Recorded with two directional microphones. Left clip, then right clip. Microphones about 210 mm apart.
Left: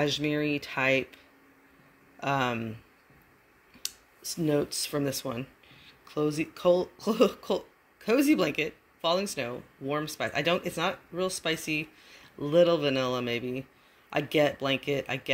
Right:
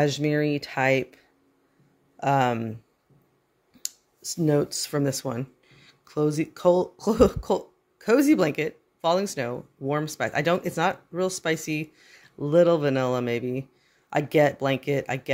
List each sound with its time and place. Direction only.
0.0 s speech: 15° right (ahead or behind)
4.2 s speech: 15° right (ahead or behind)